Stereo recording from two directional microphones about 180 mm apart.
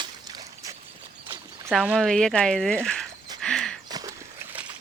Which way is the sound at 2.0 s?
5° left (ahead or behind).